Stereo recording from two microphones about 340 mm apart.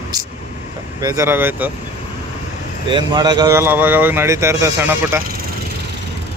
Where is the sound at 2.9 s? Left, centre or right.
Centre.